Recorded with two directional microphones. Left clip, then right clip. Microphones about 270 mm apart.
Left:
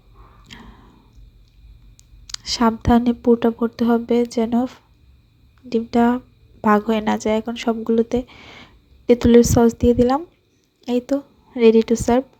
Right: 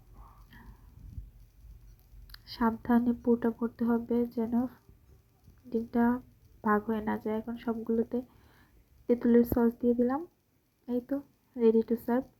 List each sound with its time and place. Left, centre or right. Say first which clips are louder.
2.2 s a woman's voice: left 12 dB; left